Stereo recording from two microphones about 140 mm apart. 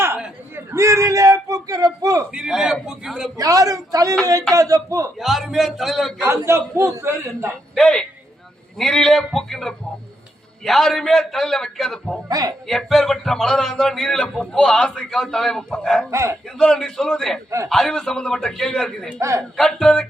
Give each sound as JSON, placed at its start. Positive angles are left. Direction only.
{"t": 0.2, "sound": "speech", "side_deg": -15}
{"t": 2.3, "sound": "speech", "side_deg": -5}
{"t": 3.3, "sound": "a man's voice", "side_deg": -25}
{"t": 5.2, "sound": "speech", "side_deg": 0}
{"t": 6.2, "sound": "a man's voice", "side_deg": -20}
{"t": 7.8, "sound": "speech", "side_deg": 5}
{"t": 12.3, "sound": "a man's voice", "side_deg": -25}
{"t": 12.6, "sound": "speech", "side_deg": 0}
{"t": 16.0, "sound": "a man's voice", "side_deg": -20}
{"t": 16.6, "sound": "speech", "side_deg": 5}
{"t": 19.2, "sound": "a man's voice", "side_deg": -20}
{"t": 19.5, "sound": "speech", "side_deg": 5}